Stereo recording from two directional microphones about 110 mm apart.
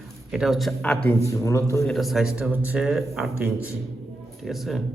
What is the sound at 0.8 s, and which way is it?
Speech, 10° left (ahead or behind).